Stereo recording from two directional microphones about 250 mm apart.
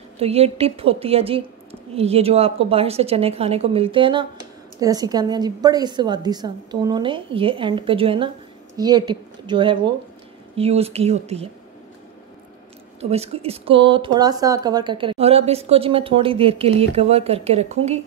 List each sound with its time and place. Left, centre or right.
0.2 s a woman's voice: right
13.0 s a woman's voice: right